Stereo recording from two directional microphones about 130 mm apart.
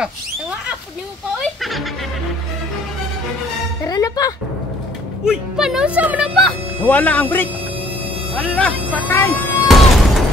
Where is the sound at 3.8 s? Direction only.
30° left (ahead or behind).